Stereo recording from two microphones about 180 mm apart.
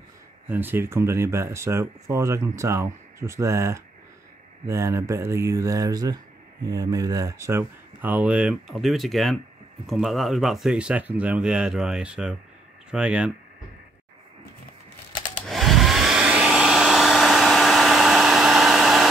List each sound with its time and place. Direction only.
0.5 s speech: 10° right (ahead or behind)
15.4 s hair dryer: centre (ahead or behind)